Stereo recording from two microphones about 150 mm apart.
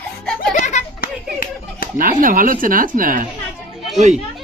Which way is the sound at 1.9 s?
65° right (ahead or behind).